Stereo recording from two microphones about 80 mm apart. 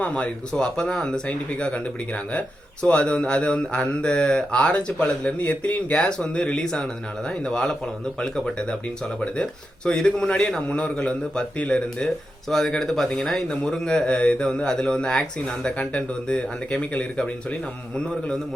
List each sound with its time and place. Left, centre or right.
0.0 s a man's voice: centre